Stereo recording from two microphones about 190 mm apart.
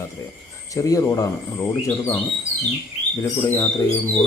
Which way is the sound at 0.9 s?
15° left (ahead or behind).